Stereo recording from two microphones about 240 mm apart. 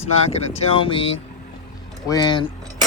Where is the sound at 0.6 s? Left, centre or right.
Left.